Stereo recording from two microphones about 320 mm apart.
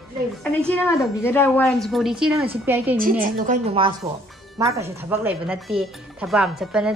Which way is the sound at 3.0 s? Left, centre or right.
Right.